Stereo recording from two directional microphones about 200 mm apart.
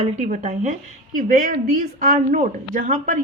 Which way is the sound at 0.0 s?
35° right (ahead or behind).